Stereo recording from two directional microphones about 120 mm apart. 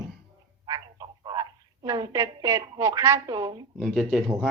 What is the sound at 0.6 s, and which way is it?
Speech, 35° right (ahead or behind).